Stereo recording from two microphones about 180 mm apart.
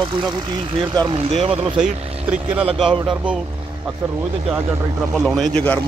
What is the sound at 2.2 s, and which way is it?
Speech, 5° right (ahead or behind).